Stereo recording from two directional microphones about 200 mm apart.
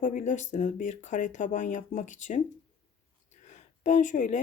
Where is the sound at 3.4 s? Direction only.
35° left (ahead or behind).